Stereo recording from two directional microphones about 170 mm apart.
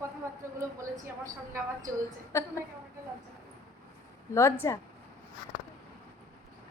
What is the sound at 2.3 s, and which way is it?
Speech, 15° left (ahead or behind).